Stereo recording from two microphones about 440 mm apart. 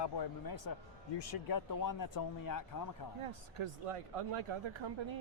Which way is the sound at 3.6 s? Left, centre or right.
Right.